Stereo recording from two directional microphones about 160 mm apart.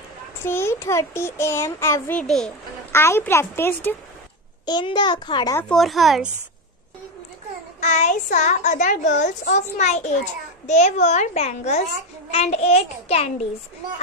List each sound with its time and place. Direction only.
0.4 s a child's voice: 15° left (ahead or behind)
2.9 s a child's voice: 15° left (ahead or behind)
4.6 s a child's voice: 30° left (ahead or behind)
5.6 s speech: 5° left (ahead or behind)
7.8 s a child's voice: 50° left (ahead or behind)
12.3 s child singing: 40° left (ahead or behind)